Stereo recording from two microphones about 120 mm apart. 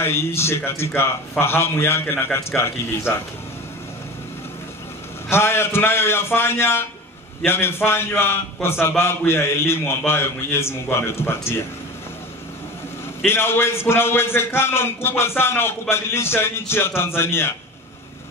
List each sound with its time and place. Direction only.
0.0 s a man's voice: 20° left (ahead or behind)
5.3 s a man's voice: 20° left (ahead or behind)
13.2 s a man's voice: 20° left (ahead or behind)